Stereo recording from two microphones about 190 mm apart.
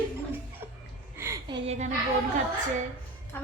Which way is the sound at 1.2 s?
15° right (ahead or behind).